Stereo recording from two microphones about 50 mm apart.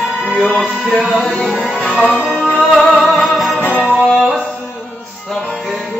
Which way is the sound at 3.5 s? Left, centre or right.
Left.